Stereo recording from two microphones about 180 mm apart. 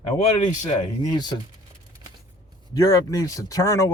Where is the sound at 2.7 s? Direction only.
20° left (ahead or behind).